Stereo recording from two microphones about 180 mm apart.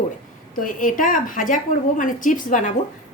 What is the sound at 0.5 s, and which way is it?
A woman's voice, 50° left (ahead or behind).